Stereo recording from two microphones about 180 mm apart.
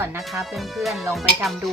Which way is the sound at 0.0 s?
15° right (ahead or behind).